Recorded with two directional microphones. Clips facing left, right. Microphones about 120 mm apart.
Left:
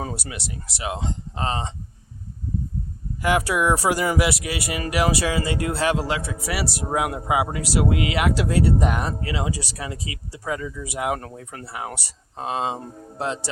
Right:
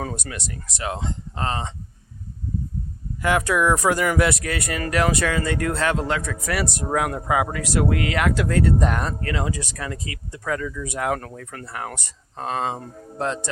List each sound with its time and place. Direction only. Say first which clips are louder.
0.1 s speech: even; 10° left (ahead or behind)
3.2 s speech: right 1 dB; 15° left (ahead or behind)
6.2 s speech: right 1 dB; 30° left (ahead or behind)
6.5 s speech: right 2 dB; 5° left (ahead or behind)
11.6 s speech: even; 10° left (ahead or behind)